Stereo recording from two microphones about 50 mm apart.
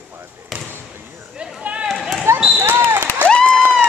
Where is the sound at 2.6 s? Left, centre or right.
Right.